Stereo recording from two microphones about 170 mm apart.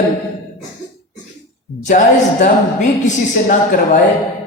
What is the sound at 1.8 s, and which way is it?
A woman's voice, 50° left (ahead or behind).